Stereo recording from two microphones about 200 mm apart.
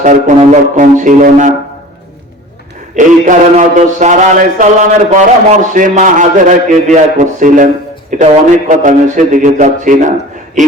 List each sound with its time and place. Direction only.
0.0 s a man's voice: 40° right (ahead or behind)
2.9 s a man's voice: 35° right (ahead or behind)